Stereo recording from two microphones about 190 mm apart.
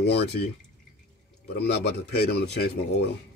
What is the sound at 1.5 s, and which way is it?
Speech, 55° left (ahead or behind).